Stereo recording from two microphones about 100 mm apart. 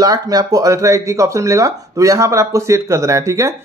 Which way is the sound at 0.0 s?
40° right (ahead or behind).